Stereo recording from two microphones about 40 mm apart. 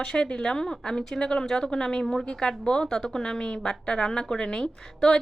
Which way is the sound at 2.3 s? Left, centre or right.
Centre.